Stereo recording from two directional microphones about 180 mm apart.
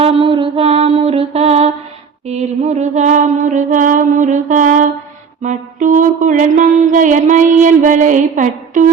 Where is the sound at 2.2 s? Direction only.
40° right (ahead or behind).